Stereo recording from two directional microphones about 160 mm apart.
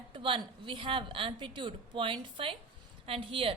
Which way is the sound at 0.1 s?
30° right (ahead or behind).